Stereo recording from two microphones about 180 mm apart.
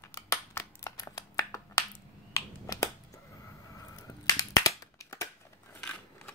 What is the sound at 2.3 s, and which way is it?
Finger snapping, 15° left (ahead or behind).